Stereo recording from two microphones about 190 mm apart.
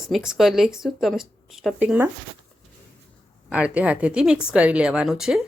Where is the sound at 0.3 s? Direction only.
Centre (ahead or behind).